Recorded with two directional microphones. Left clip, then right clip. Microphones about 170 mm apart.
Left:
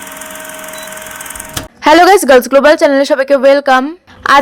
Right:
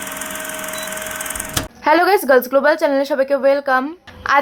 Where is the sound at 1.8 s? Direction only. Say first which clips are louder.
Left 8 dB; 45° left (ahead or behind).